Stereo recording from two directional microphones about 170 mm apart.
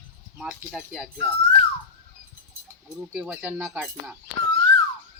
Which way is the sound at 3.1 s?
10° right (ahead or behind).